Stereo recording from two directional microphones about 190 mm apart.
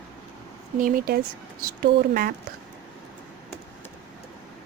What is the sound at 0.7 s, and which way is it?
Speech, 45° right (ahead or behind).